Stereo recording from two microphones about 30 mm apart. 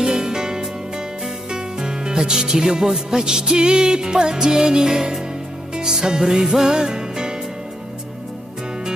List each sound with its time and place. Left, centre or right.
0.0 s music: centre